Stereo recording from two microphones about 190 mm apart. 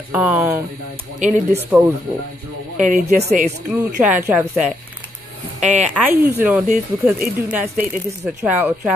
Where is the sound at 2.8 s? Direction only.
40° right (ahead or behind).